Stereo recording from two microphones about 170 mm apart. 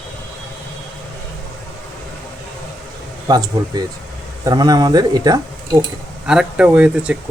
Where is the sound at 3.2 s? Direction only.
25° right (ahead or behind).